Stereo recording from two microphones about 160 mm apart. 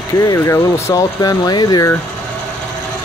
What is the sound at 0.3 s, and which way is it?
Speech, 20° left (ahead or behind).